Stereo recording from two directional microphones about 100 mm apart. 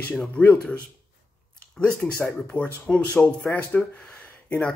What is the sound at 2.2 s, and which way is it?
Speech, 5° left (ahead or behind).